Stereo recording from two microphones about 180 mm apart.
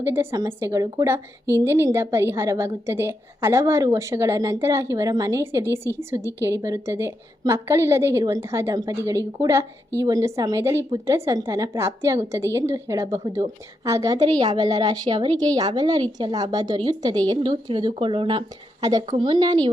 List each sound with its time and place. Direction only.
0.0 s a woman's voice: 15° right (ahead or behind)